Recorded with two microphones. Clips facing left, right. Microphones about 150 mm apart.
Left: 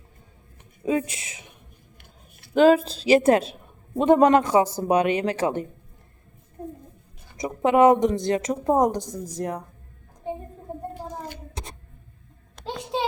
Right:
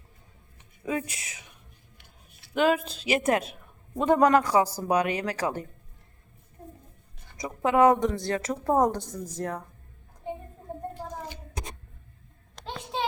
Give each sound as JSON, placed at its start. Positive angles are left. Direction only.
{"t": 0.9, "sound": "speech", "side_deg": 25}
{"t": 2.0, "sound": "a sound", "side_deg": 50}
{"t": 2.6, "sound": "a woman's voice", "side_deg": 35}
{"t": 7.3, "sound": "a woman's voice", "side_deg": 20}